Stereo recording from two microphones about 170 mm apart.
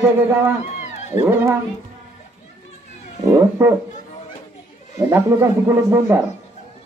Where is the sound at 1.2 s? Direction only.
15° right (ahead or behind).